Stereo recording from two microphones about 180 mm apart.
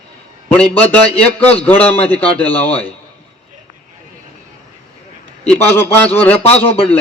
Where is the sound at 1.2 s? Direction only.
10° left (ahead or behind).